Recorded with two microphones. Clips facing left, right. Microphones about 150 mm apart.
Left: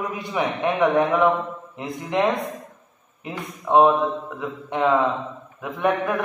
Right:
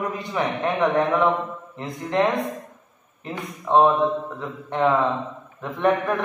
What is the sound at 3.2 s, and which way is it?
Speech, 15° left (ahead or behind).